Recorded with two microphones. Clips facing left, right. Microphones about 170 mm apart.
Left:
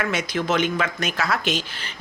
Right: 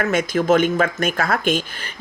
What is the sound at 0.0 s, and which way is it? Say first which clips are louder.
Speech: right 5 dB; 50° right (ahead or behind).